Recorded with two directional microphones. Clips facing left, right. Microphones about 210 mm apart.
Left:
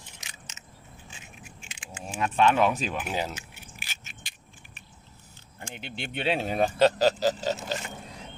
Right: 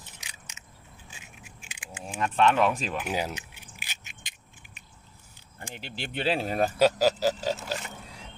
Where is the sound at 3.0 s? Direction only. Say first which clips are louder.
Right 1 dB; 10° right (ahead or behind).